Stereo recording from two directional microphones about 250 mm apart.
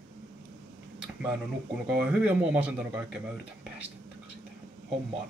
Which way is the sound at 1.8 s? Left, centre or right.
Centre.